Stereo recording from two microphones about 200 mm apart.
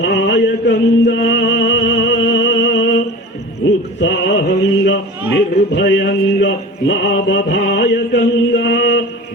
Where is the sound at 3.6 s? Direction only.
65° left (ahead or behind).